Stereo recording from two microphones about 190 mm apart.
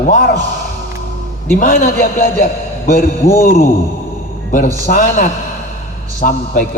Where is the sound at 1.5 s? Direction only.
45° left (ahead or behind).